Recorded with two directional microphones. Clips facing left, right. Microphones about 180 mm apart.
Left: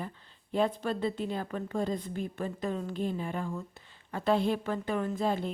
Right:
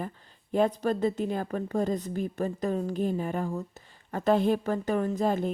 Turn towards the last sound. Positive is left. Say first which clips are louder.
# right 4 dB
turn(degrees=-45)  # may be behind; listen again after turning